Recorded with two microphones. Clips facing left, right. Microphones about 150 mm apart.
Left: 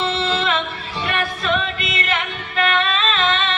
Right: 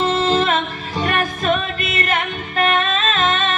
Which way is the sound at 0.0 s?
45° right (ahead or behind).